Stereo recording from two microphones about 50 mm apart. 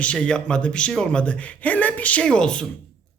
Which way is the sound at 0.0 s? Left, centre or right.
Left.